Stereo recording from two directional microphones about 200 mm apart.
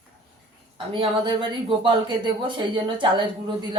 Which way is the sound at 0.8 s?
25° right (ahead or behind).